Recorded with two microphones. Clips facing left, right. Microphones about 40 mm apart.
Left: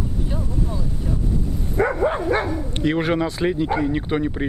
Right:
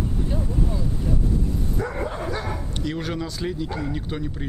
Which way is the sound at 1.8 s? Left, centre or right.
Left.